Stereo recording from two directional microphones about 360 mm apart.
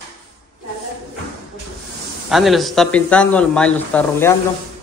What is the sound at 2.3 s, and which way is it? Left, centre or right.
Speech, centre.